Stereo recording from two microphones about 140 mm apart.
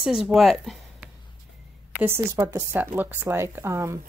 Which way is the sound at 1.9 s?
15° right (ahead or behind).